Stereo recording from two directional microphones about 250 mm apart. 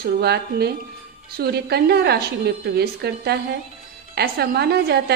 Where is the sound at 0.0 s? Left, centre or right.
Right.